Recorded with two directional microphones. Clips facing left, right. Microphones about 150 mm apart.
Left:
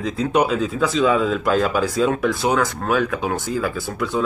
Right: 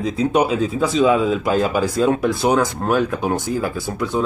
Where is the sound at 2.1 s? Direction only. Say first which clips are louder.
Right 2 dB; 15° right (ahead or behind).